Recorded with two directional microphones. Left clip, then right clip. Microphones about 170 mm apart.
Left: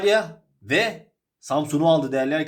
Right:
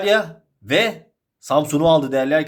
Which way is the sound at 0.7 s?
30° right (ahead or behind).